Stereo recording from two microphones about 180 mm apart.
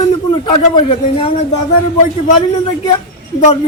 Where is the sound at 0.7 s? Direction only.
30° left (ahead or behind).